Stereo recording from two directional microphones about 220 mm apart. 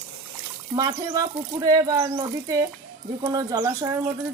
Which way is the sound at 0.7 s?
15° right (ahead or behind).